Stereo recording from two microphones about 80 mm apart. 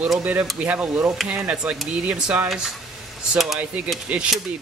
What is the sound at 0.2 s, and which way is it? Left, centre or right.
Speech, centre.